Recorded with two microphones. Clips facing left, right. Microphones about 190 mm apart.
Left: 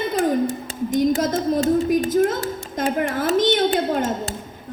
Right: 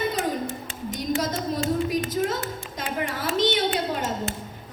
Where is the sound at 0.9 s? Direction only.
50° left (ahead or behind).